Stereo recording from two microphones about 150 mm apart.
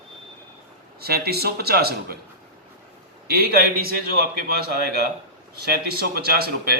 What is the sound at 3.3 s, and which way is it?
A man's voice, 90° right.